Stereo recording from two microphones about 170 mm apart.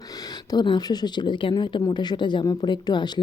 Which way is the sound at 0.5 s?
25° left (ahead or behind).